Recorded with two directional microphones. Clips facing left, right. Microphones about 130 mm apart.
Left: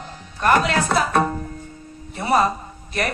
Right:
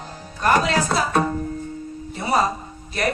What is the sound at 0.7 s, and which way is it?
Music, 50° left (ahead or behind).